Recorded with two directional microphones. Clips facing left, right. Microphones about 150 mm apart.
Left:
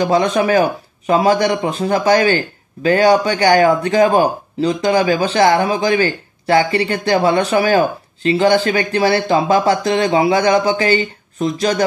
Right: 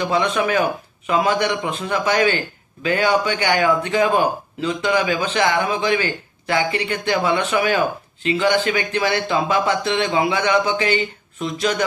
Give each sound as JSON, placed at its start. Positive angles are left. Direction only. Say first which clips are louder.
{"t": 0.0, "sound": "a man's voice", "louder": "left 5 dB", "side_deg": 40}